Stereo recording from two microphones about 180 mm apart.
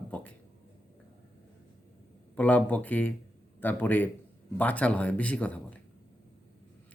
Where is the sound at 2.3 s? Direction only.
10° left (ahead or behind).